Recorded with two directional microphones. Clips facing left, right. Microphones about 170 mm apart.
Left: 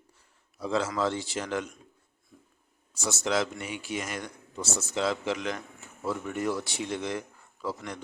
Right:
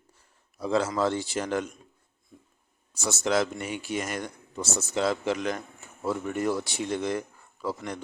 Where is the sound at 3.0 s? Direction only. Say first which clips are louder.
Right 3 dB; 45° right (ahead or behind).